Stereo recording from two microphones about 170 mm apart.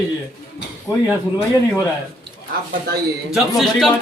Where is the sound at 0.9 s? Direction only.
20° left (ahead or behind).